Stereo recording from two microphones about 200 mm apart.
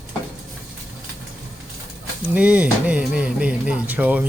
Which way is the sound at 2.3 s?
5° right (ahead or behind).